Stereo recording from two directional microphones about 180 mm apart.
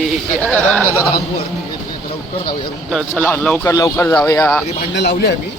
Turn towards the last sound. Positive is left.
turn(degrees=65)  # may be behind; listen again after turning